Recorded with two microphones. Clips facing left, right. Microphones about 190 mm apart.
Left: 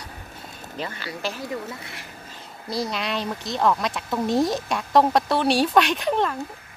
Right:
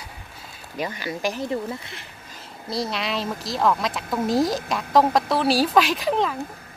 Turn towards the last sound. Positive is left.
turn(degrees=0)  # may be behind; listen again after turning